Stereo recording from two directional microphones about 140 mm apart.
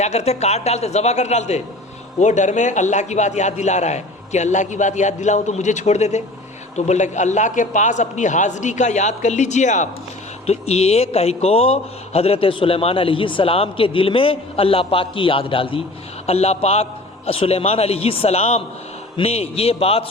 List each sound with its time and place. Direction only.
0.0 s a man's voice: 50° left (ahead or behind)
10.4 s a man's voice: 45° left (ahead or behind)